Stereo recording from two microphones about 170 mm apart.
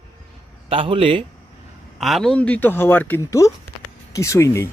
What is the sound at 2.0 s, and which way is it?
Speech, centre (ahead or behind).